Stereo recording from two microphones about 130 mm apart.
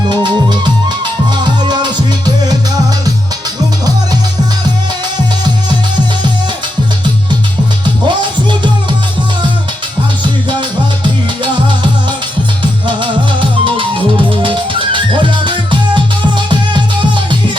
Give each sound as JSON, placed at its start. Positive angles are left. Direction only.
{"t": 0.1, "sound": "music", "side_deg": -35}
{"t": 8.0, "sound": "music", "side_deg": -35}
{"t": 13.0, "sound": "music", "side_deg": -40}
{"t": 16.5, "sound": "music", "side_deg": -40}